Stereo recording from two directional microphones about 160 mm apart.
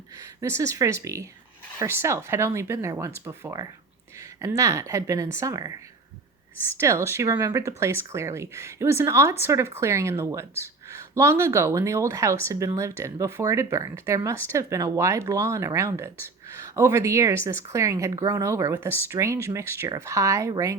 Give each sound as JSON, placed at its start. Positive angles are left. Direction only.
{"t": 0.4, "sound": "a woman's voice", "side_deg": -20}
{"t": 6.7, "sound": "a woman's voice", "side_deg": -15}